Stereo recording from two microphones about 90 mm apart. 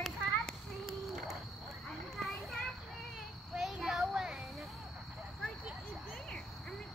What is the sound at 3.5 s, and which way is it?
Child singing, 5° right (ahead or behind).